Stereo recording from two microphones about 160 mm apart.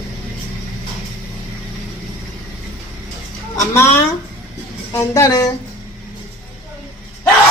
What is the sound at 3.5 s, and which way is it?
Speech, 15° left (ahead or behind).